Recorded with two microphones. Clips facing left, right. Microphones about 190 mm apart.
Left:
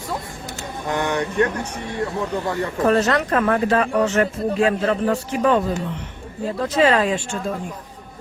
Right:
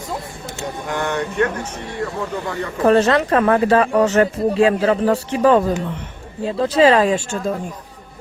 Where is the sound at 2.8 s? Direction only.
30° right (ahead or behind).